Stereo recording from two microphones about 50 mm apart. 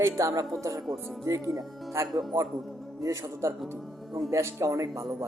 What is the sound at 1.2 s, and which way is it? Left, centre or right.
Speech, right.